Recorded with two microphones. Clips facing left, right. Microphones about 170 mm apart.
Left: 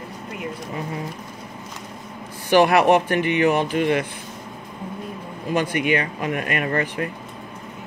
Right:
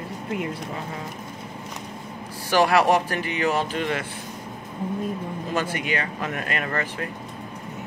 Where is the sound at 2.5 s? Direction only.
20° left (ahead or behind).